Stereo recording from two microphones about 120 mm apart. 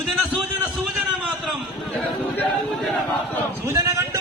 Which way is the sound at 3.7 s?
25° right (ahead or behind).